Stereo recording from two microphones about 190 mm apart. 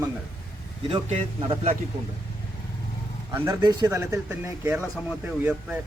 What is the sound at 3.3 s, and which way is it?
Speech, 15° right (ahead or behind).